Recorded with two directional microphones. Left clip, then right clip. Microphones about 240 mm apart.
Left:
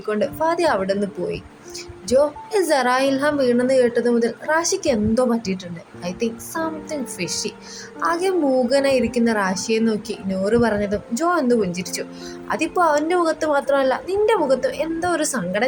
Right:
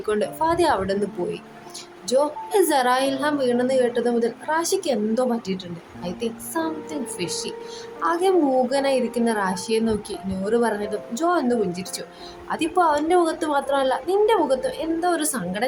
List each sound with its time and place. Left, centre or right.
0.1 s a woman's voice: centre
8.0 s a woman's voice: centre